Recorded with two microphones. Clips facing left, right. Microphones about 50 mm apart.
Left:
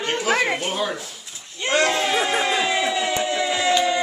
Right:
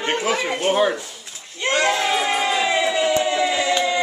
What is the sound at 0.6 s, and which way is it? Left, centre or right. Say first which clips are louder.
Speech: right 7 dB; right.